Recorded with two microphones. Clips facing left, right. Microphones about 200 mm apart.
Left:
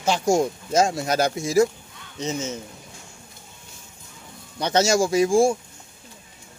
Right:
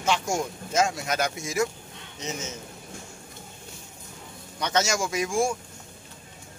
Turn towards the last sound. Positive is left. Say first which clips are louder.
# left 8 dB
turn(degrees=30)  # may be behind; listen again after turning